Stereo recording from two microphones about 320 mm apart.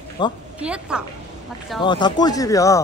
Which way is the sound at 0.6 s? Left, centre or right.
Centre.